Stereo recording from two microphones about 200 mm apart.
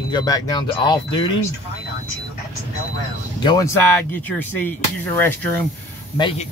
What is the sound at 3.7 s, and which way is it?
Speech, 10° left (ahead or behind).